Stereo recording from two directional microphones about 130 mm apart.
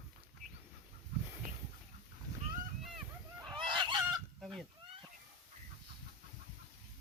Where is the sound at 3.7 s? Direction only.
40° right (ahead or behind).